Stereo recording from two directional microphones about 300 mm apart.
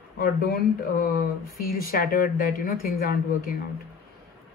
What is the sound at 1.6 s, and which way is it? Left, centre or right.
A woman's voice, left.